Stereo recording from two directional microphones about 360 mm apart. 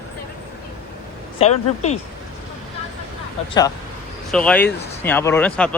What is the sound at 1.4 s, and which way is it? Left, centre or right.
Speech, centre.